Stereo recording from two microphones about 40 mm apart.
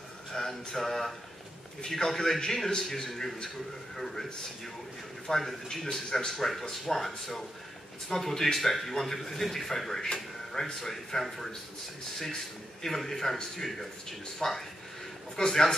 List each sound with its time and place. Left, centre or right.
0.3 s speech: centre
12.8 s speech: centre
14.4 s speech: centre